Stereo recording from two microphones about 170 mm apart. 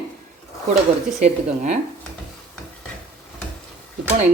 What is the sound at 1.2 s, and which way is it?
Speech, 45° right (ahead or behind).